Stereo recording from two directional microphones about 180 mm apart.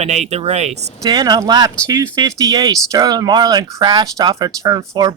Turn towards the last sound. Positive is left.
turn(degrees=-20)  # may be behind; listen again after turning